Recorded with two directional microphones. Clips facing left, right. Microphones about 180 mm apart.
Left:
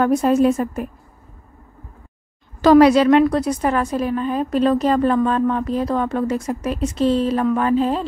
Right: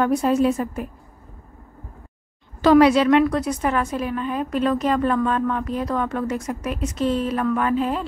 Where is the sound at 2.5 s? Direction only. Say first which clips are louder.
Left 3 dB; 40° left (ahead or behind).